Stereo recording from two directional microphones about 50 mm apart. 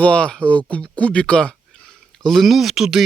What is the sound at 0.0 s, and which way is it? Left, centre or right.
Speech, left.